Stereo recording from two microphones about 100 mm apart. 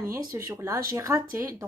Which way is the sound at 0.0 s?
30° right (ahead or behind).